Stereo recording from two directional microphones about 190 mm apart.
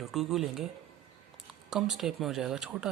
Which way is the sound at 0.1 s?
Centre (ahead or behind).